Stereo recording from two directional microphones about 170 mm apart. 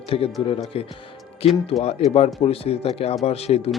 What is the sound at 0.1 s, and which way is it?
Speech, 35° left (ahead or behind).